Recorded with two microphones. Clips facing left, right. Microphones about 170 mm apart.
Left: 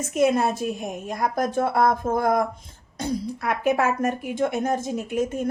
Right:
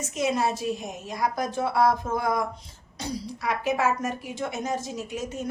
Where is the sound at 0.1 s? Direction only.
55° left (ahead or behind).